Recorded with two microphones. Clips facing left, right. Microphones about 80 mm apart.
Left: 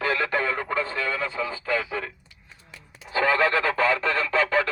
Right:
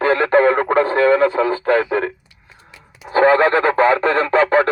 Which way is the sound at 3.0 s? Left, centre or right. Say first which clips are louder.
Right 9 dB; right.